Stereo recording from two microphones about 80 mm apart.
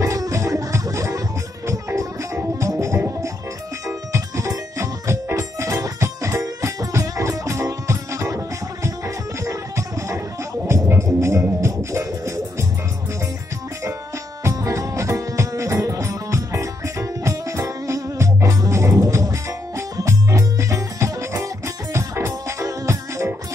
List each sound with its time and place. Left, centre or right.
0.0 s music: right
14.4 s music: right